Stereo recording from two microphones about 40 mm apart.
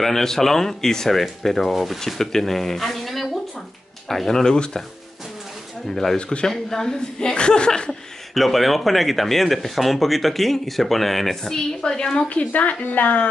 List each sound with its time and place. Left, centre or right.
0.0 s speech: centre
2.0 s speech: centre
5.9 s speech: centre
6.1 s a woman's voice: left
6.4 s a woman's voice: centre
8.4 s speech: centre
12.3 s speech: left